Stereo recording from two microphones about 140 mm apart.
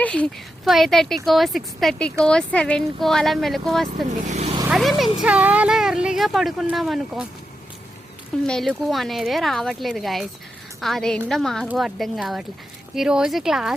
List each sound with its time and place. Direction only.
0.0 s a woman's voice: 10° left (ahead or behind)
3.8 s speech: 55° right (ahead or behind)
4.7 s a woman's voice: centre (ahead or behind)
8.4 s a woman's voice: centre (ahead or behind)